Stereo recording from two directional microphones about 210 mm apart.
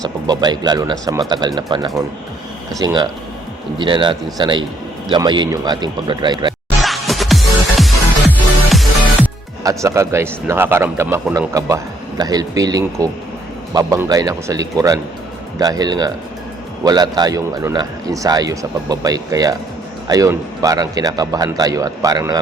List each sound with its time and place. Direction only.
0.0 s speech: 20° right (ahead or behind)
6.8 s music: centre (ahead or behind)
9.6 s speech: 15° right (ahead or behind)